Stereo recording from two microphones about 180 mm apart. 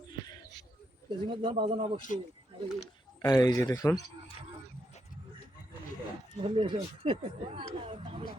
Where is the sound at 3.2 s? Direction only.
20° left (ahead or behind).